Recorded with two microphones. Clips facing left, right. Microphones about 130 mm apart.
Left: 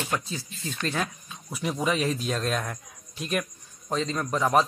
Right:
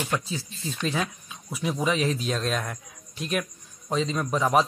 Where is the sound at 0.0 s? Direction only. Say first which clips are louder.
Right 2 dB; centre (ahead or behind).